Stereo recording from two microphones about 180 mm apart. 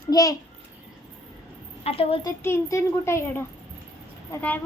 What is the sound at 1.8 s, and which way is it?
Speech, 30° left (ahead or behind).